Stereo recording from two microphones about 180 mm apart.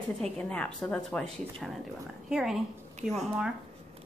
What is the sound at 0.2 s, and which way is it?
Speech, 5° left (ahead or behind).